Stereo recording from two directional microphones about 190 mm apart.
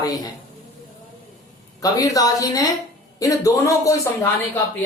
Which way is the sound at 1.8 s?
20° left (ahead or behind).